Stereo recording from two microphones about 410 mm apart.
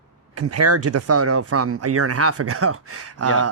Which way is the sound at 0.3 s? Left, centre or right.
Right.